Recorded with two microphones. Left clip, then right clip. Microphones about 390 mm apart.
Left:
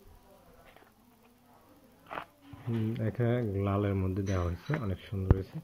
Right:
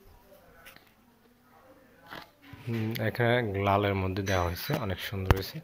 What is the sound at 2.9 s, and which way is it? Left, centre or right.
Speech, centre.